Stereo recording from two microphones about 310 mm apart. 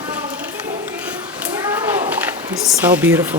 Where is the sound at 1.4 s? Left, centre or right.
Centre.